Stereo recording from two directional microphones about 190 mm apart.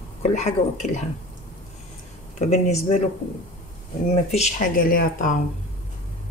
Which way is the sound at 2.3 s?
35° left (ahead or behind).